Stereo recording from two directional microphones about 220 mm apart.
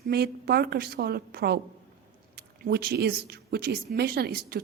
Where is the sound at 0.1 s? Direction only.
45° right (ahead or behind).